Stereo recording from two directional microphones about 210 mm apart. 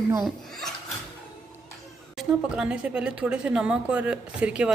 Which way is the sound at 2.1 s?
5° right (ahead or behind).